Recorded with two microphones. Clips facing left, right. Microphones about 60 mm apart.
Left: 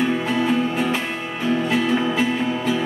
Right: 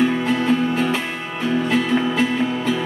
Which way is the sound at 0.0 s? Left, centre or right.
Centre.